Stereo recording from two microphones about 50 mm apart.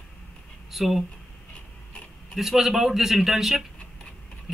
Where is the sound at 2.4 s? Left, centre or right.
Centre.